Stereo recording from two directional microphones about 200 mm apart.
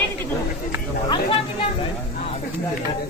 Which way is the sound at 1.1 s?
25° left (ahead or behind).